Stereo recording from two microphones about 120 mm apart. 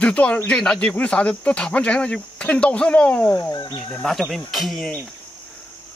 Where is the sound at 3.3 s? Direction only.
30° left (ahead or behind).